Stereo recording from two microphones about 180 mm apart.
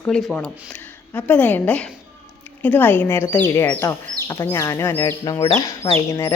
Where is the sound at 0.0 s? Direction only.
5° left (ahead or behind).